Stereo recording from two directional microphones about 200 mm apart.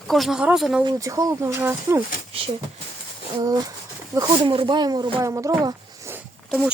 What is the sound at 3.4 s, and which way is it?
Speech, 20° right (ahead or behind).